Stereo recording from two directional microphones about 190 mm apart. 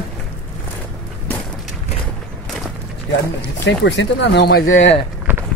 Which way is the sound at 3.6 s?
70° left (ahead or behind).